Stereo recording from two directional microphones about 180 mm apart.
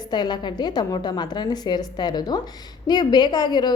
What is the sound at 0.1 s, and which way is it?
A woman's voice, 25° left (ahead or behind).